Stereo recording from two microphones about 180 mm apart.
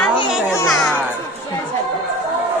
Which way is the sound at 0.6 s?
5° left (ahead or behind).